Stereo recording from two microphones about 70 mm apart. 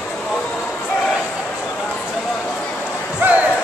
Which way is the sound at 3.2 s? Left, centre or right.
Right.